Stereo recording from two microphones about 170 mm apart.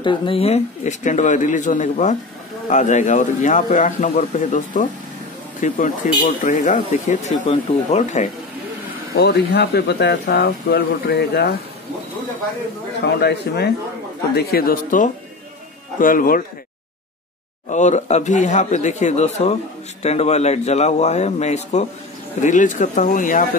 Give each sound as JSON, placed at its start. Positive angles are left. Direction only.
{"t": 0.0, "sound": "speech", "side_deg": 30}
{"t": 9.1, "sound": "speech", "side_deg": 75}
{"t": 13.0, "sound": "speech", "side_deg": 75}
{"t": 14.3, "sound": "a man's voice", "side_deg": 65}
{"t": 17.6, "sound": "speech", "side_deg": 45}